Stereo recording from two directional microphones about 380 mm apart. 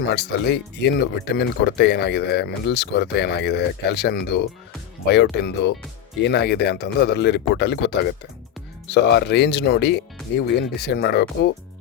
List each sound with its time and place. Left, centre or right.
0.0 s speech: left